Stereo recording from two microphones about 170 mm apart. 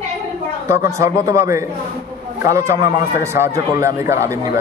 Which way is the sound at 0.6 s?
15° right (ahead or behind).